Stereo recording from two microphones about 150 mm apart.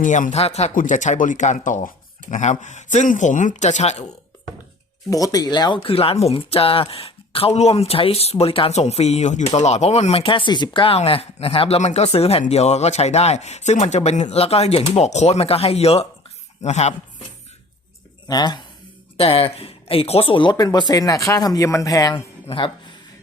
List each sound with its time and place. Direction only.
0.0 s speech: 55° left (ahead or behind)
5.1 s speech: 25° left (ahead or behind); by 16.9 s 50° left (ahead or behind)
18.3 s speech: 25° left (ahead or behind)
19.1 s speech: 40° left (ahead or behind)
22.4 s speech: 35° left (ahead or behind)